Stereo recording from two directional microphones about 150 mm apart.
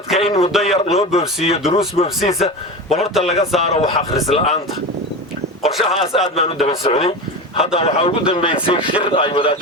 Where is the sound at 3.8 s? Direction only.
40° left (ahead or behind).